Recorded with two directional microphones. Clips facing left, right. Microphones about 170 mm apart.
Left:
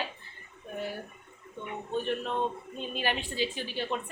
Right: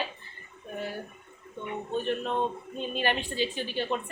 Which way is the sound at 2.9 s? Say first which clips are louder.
Right 3 dB; 5° left (ahead or behind).